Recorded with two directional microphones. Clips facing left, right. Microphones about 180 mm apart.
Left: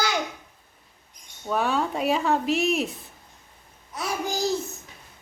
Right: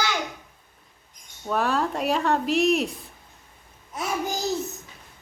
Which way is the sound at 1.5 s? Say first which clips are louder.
Even; centre (ahead or behind).